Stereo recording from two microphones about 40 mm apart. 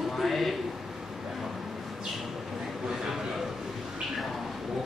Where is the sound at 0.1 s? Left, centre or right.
Centre.